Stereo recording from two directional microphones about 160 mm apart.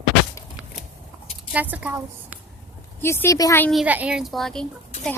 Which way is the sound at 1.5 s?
10° right (ahead or behind).